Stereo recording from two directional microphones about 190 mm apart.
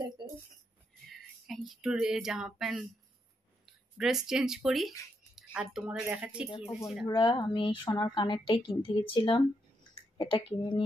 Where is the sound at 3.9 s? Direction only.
5° right (ahead or behind).